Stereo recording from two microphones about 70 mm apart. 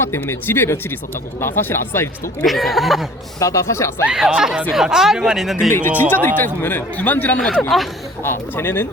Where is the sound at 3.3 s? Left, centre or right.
Left.